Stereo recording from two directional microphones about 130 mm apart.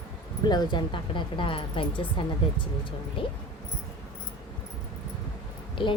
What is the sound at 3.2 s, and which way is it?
Speech, 40° left (ahead or behind).